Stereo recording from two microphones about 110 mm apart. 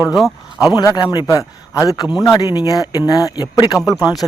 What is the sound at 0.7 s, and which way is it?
A man's voice, 40° left (ahead or behind).